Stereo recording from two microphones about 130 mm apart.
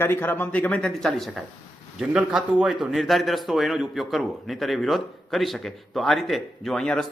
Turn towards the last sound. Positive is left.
turn(degrees=5)  # may be behind; listen again after turning